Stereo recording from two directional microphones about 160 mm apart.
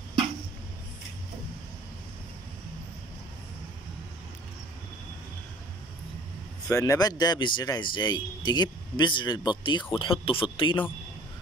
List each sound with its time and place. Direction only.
6.7 s a man's voice: 20° left (ahead or behind)